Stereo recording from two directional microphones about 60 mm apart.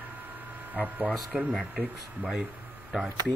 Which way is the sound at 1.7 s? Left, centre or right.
Right.